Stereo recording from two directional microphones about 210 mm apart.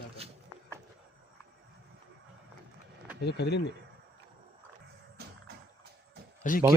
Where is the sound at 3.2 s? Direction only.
55° left (ahead or behind).